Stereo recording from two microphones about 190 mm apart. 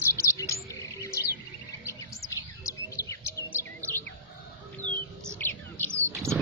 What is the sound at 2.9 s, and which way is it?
Chirp, 15° left (ahead or behind).